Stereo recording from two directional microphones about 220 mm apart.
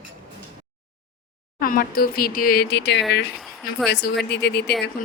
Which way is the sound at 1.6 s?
40° left (ahead or behind).